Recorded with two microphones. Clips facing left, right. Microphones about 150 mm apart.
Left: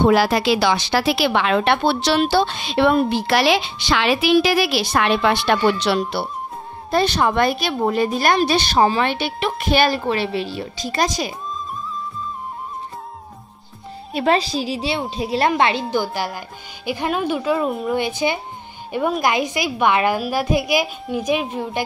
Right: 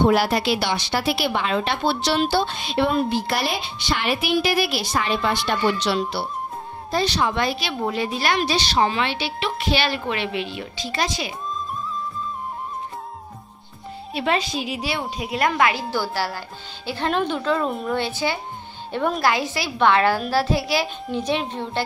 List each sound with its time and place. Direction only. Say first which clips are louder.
0.1 s a woman's voice: left 3 dB; 90° left; by 5.9 s 65° left (ahead or behind)
6.9 s speech: left 4 dB; 55° left (ahead or behind)
8.7 s a woman's voice: left 4 dB; 40° left (ahead or behind)
14.1 s a woman's voice: left 5 dB; 35° left (ahead or behind); by 17.8 s 5° left (ahead or behind)
17.8 s a woman's voice: left 3 dB; 15° left (ahead or behind)